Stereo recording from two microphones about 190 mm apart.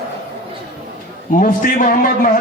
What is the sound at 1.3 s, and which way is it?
Speech, 45° left (ahead or behind).